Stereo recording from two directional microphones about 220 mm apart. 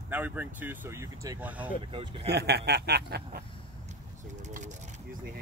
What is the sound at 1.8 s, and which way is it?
Speech, 25° right (ahead or behind).